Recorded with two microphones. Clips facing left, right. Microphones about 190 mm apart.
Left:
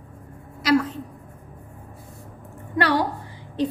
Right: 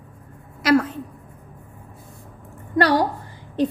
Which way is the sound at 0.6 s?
55° right (ahead or behind).